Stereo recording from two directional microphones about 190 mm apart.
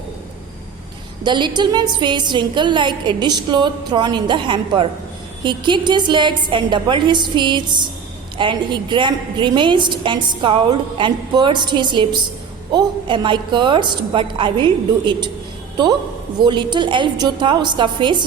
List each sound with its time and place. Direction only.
1.2 s a woman's voice: 25° right (ahead or behind)
16.4 s a woman's voice: 25° right (ahead or behind)